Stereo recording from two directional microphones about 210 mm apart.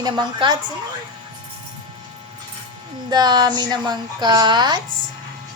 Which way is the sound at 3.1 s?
20° right (ahead or behind).